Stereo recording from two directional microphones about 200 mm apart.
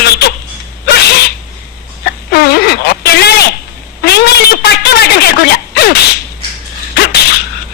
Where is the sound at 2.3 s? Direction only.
50° left (ahead or behind).